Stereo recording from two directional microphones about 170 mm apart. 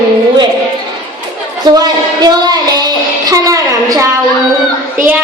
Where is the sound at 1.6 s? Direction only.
25° right (ahead or behind).